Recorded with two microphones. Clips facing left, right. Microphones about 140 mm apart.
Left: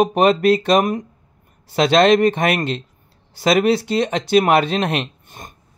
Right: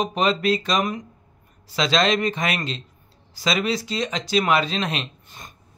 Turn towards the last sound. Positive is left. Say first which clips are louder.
# left 6 dB
turn(degrees=55)  # may be behind; listen again after turning